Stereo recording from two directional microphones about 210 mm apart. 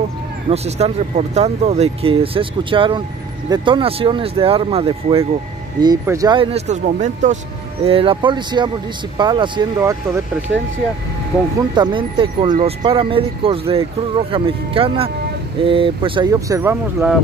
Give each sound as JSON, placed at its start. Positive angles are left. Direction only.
{"t": 0.5, "sound": "speech", "side_deg": -30}
{"t": 11.7, "sound": "speech", "side_deg": -20}